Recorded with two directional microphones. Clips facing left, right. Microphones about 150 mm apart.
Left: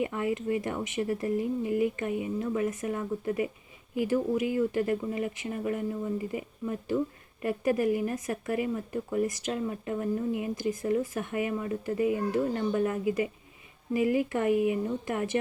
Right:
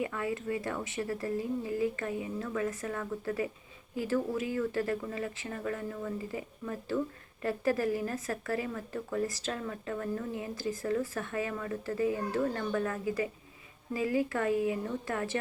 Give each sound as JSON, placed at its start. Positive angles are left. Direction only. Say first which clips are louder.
{"t": 0.0, "sound": "speech", "louder": "left 4 dB", "side_deg": 20}